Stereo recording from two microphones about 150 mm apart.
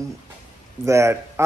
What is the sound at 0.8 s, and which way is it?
Speech, 20° right (ahead or behind).